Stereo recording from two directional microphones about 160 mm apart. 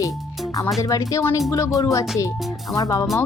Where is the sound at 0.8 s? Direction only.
20° left (ahead or behind).